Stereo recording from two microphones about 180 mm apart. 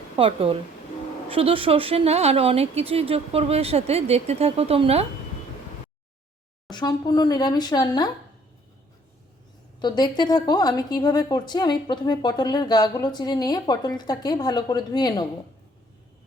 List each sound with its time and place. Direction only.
0.2 s speech: 30° right (ahead or behind)
6.7 s a woman's voice: 25° left (ahead or behind)
9.8 s a woman's voice: 25° left (ahead or behind)